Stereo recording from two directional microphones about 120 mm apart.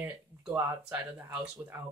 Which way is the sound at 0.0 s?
15° right (ahead or behind).